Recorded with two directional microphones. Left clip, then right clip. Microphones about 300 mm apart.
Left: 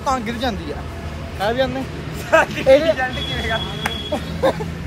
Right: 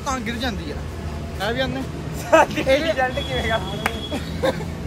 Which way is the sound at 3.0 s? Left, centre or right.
Right.